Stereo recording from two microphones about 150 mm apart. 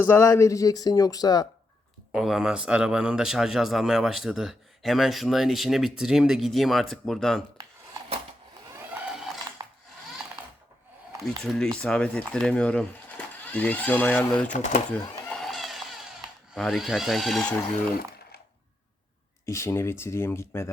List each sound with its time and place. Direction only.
0.1 s speech: 20° left (ahead or behind)
2.1 s speech: centre (ahead or behind)
8.8 s a sound: 5° right (ahead or behind)
11.4 s speech: 5° left (ahead or behind)
14.5 s speech: 55° left (ahead or behind)
14.8 s a sound: 5° left (ahead or behind)
16.6 s speech: centre (ahead or behind)
19.5 s speech: 15° left (ahead or behind)